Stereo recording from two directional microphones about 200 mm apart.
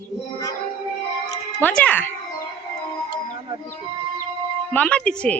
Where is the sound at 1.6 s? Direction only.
5° left (ahead or behind).